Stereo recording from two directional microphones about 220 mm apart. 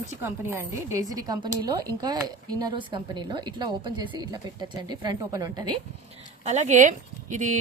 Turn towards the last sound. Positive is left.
turn(degrees=-35)  # may be behind; listen again after turning